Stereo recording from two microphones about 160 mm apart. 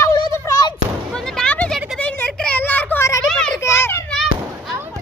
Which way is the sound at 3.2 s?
5° left (ahead or behind).